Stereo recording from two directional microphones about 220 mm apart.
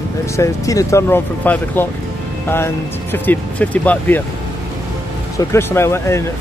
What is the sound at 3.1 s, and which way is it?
Speech, 5° left (ahead or behind).